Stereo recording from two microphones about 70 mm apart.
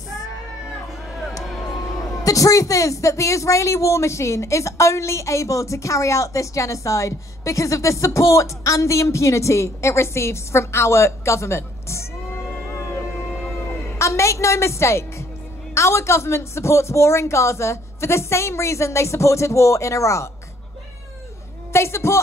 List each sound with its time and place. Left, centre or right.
2.2 s a woman's voice: left
12.6 s a sound: left
13.6 s music: left
15.7 s a woman's voice: left
21.7 s a man's voice: left